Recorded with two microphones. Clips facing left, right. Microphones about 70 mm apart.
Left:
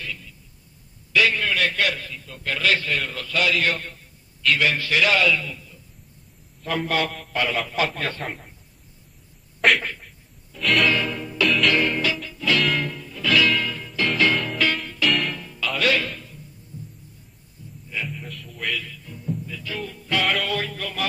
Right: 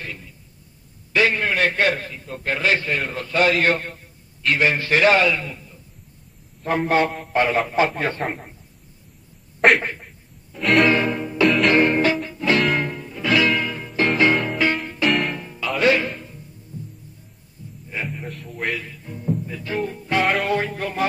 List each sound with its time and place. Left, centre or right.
0.0 s a sound: right
1.1 s a man's voice: right
9.6 s a sound: right
10.6 s music: right
10.9 s music: right
15.0 s music: centre
15.3 s music: right
17.8 s music: right
18.8 s music: right